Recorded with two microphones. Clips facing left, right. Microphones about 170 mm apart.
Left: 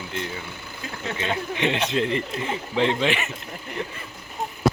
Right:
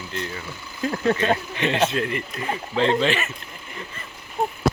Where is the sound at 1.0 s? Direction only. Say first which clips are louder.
Right 7 dB; 50° right (ahead or behind).